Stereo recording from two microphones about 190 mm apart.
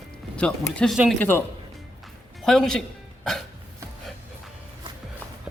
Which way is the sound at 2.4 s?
Centre (ahead or behind).